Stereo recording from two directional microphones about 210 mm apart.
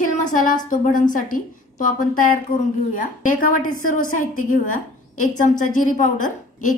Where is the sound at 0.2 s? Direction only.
40° left (ahead or behind).